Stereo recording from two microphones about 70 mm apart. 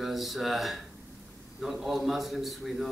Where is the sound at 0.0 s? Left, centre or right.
Centre.